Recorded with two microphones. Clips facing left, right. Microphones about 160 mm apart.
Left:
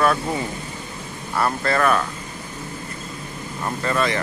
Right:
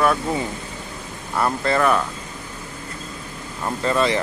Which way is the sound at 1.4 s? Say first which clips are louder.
Right 1 dB; 15° right (ahead or behind).